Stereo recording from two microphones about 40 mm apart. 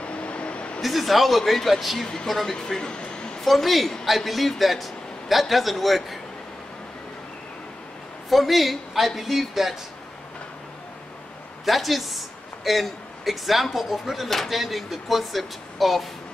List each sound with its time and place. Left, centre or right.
0.0 s vehicle: left
0.7 s a man's voice: centre
2.5 s speech: left
3.3 s a woman's voice: centre
8.3 s a man's voice: centre
11.6 s a man's voice: centre